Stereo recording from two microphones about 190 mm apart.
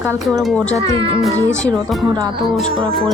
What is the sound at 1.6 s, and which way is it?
Speech, centre (ahead or behind).